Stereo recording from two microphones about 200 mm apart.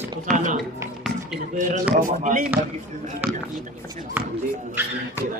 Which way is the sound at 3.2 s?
10° right (ahead or behind).